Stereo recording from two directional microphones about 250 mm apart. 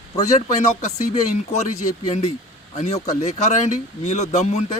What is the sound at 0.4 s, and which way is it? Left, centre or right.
Speech, left.